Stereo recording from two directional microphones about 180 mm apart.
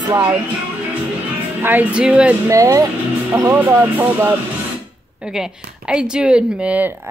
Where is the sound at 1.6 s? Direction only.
10° right (ahead or behind).